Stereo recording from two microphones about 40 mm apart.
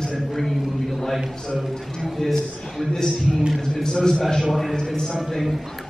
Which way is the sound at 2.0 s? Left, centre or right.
Centre.